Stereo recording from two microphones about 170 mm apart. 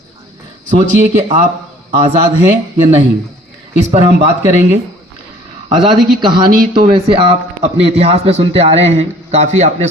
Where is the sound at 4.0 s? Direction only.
45° left (ahead or behind).